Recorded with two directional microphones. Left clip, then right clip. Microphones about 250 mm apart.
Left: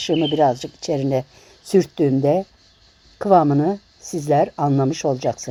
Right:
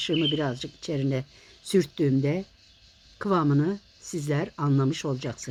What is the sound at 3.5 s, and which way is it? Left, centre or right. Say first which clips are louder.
Speech: left 7 dB; left.